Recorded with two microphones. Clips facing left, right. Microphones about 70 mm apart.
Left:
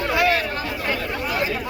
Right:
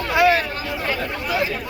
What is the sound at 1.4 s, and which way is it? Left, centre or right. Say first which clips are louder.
Chatter: left 1 dB; centre.